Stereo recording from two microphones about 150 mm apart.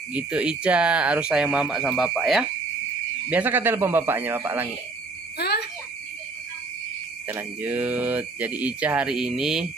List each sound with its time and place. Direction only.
0.1 s speech: 5° right (ahead or behind)
5.4 s a sound: 90° left
7.2 s speech: 10° right (ahead or behind)